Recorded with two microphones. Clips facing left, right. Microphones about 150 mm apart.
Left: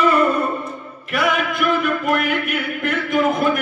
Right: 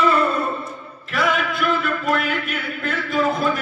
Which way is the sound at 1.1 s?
15° left (ahead or behind).